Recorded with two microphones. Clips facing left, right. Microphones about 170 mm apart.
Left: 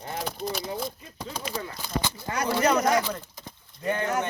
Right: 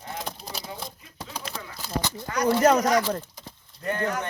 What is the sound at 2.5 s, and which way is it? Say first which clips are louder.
Speech: right 4 dB; 45° right (ahead or behind).